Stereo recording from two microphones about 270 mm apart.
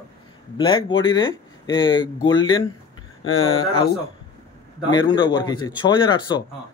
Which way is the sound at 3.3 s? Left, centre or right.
Left.